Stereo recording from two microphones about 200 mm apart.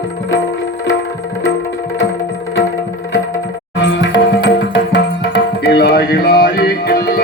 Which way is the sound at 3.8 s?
60° left (ahead or behind).